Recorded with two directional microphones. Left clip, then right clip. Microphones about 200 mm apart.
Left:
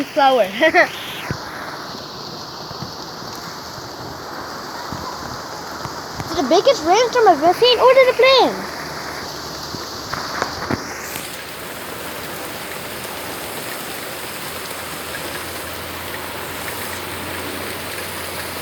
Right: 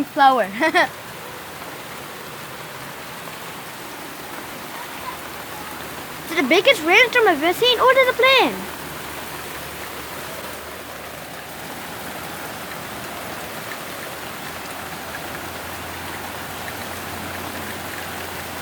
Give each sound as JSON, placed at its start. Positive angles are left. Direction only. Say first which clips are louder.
{"t": 0.2, "sound": "speech", "louder": "left 2 dB", "side_deg": -20}
{"t": 6.3, "sound": "speech", "louder": "left 1 dB", "side_deg": -65}
{"t": 6.7, "sound": "speech", "louder": "even", "side_deg": -30}
{"t": 7.6, "sound": "speech", "louder": "left 2 dB", "side_deg": -15}